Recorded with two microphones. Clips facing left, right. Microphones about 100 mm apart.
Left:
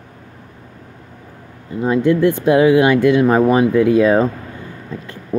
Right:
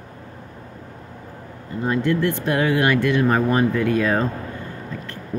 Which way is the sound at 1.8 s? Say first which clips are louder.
Left 7 dB; 15° left (ahead or behind).